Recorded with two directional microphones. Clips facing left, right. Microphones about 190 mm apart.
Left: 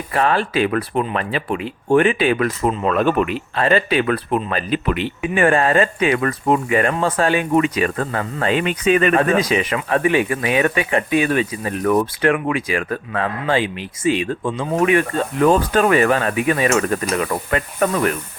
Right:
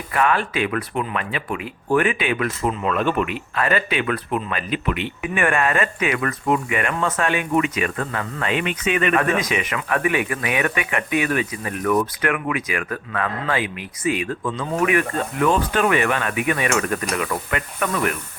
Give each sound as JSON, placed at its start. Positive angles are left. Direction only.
{"t": 0.1, "sound": "speech", "side_deg": 30}